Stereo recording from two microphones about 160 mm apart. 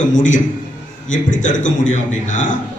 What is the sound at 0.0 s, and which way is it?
A man's voice, 50° left (ahead or behind).